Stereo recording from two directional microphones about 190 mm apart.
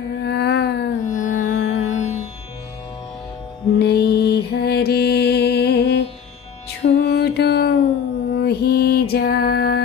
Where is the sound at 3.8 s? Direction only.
60° left (ahead or behind).